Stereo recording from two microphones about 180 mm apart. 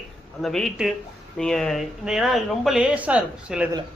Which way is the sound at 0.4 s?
Centre (ahead or behind).